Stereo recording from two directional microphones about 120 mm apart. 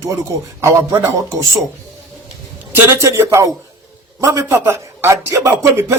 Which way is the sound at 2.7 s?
25° right (ahead or behind).